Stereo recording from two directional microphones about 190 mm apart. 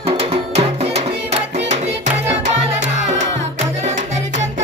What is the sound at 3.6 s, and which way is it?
Music, 40° right (ahead or behind).